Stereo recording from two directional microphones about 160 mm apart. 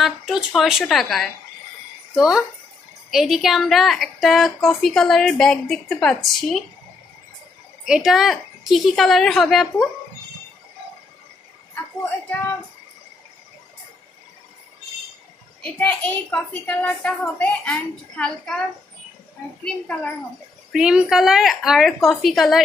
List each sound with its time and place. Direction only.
0.0 s a woman's voice: centre (ahead or behind)
7.8 s a woman's voice: centre (ahead or behind)
11.7 s speech: 15° left (ahead or behind)
15.8 s a child's voice: 5° left (ahead or behind)
20.7 s a woman's voice: 5° right (ahead or behind)